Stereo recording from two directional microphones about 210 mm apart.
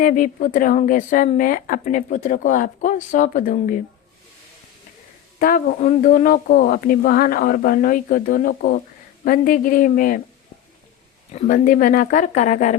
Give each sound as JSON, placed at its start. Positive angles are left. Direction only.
{"t": 0.0, "sound": "speech", "side_deg": 40}
{"t": 5.4, "sound": "speech", "side_deg": 40}
{"t": 11.3, "sound": "speech", "side_deg": 40}